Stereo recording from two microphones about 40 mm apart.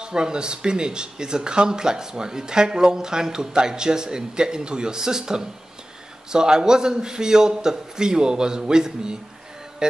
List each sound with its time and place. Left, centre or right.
0.0 s a man's voice: right